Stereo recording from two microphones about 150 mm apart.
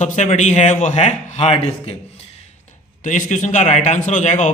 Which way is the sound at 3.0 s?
60° left (ahead or behind).